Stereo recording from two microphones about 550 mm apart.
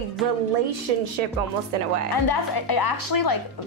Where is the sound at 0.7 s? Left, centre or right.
Right.